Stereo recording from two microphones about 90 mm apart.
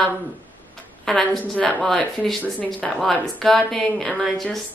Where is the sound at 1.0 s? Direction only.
10° left (ahead or behind).